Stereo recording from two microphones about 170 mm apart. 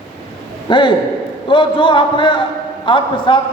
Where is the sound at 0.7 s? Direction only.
30° left (ahead or behind).